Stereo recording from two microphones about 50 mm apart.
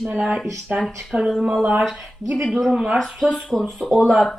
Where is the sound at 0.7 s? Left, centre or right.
Right.